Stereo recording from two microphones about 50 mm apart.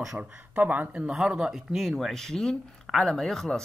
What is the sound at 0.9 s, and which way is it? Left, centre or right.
Speech, centre.